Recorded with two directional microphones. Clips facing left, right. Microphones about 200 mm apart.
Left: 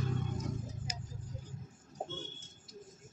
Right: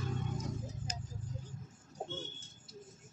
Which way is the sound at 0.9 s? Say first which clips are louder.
Right 1 dB; 10° left (ahead or behind).